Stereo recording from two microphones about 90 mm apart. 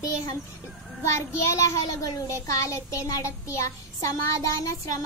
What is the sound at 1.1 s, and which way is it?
A child's voice, 35° left (ahead or behind).